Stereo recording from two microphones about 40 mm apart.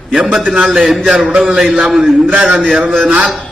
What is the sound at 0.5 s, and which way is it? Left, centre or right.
Speech, centre.